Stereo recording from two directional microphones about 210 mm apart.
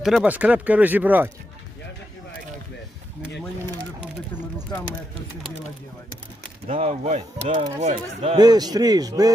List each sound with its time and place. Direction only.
0.0 s speech: centre (ahead or behind)
4.5 s a sound: 5° left (ahead or behind)
6.7 s speech: 30° right (ahead or behind)
8.4 s a man's voice: 20° right (ahead or behind)